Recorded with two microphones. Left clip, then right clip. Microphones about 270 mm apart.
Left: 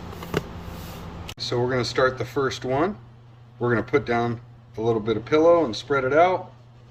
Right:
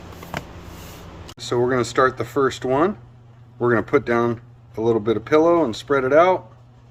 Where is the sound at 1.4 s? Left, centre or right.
Centre.